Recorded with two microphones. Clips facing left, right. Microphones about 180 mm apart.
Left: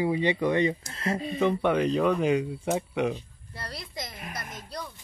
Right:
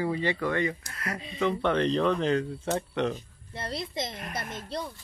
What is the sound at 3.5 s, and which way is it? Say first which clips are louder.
Speech: right 5 dB; 25° right (ahead or behind).